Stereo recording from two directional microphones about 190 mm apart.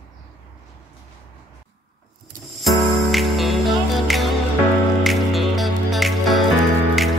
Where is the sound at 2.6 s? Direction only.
Centre (ahead or behind).